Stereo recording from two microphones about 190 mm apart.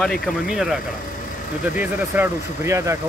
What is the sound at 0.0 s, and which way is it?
Speech, centre (ahead or behind).